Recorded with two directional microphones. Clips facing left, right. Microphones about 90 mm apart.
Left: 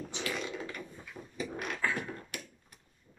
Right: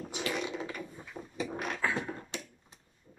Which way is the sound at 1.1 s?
30° right (ahead or behind).